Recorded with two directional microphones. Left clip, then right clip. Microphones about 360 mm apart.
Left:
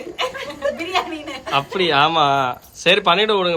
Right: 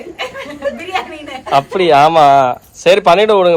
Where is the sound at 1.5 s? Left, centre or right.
Centre.